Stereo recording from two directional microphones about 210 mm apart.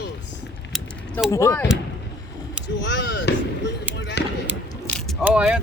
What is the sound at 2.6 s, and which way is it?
Speech, 55° left (ahead or behind).